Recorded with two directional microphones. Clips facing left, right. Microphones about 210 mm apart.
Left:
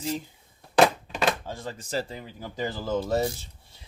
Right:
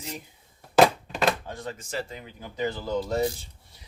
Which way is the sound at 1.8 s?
35° left (ahead or behind).